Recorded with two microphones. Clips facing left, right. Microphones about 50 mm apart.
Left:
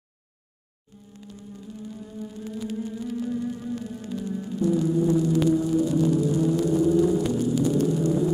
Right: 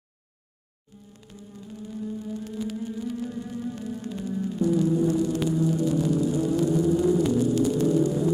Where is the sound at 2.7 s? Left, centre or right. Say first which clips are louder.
Left 1 dB; centre.